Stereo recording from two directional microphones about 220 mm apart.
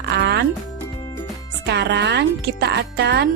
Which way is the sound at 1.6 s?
50° right (ahead or behind).